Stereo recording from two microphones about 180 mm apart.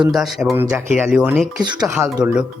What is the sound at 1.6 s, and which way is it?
Speech, 25° right (ahead or behind).